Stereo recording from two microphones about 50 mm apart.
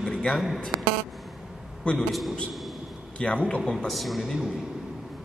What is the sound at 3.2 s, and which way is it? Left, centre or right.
Speech, left.